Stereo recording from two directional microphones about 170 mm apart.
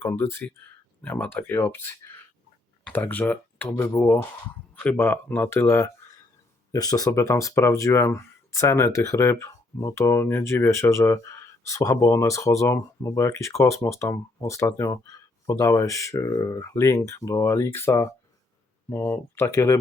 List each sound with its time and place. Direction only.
0.0 s speech: 15° left (ahead or behind)